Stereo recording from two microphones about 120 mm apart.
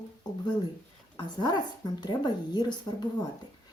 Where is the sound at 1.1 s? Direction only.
35° left (ahead or behind).